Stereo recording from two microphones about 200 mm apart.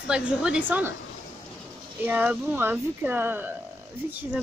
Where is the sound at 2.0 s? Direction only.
10° right (ahead or behind).